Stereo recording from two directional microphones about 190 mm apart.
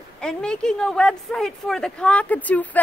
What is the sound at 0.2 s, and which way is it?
Speech, 5° left (ahead or behind).